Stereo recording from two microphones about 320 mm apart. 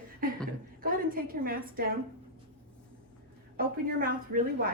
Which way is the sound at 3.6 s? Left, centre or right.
Right.